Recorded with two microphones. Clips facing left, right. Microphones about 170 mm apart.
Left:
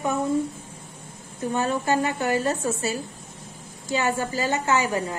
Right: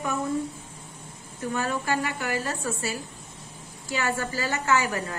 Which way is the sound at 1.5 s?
25° left (ahead or behind).